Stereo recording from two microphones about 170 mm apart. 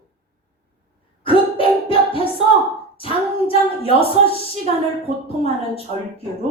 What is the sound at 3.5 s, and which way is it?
Speech, 35° left (ahead or behind).